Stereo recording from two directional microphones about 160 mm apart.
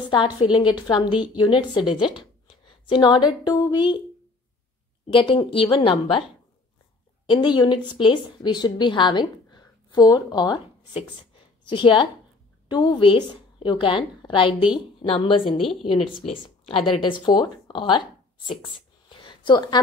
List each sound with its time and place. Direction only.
0.1 s a woman's voice: 30° left (ahead or behind)
2.4 s a sound: 30° left (ahead or behind)
3.4 s speech: 25° left (ahead or behind)
5.0 s a woman's voice: 35° left (ahead or behind)
7.2 s a woman's voice: 30° left (ahead or behind)
15.4 s a woman's voice: centre (ahead or behind)
16.3 s speech: 35° left (ahead or behind)
18.6 s a sound: 30° left (ahead or behind)